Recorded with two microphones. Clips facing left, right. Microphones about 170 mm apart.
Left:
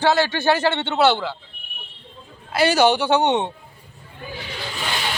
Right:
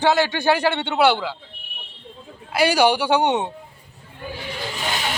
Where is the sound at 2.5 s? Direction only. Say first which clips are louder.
Left 1 dB; 10° right (ahead or behind).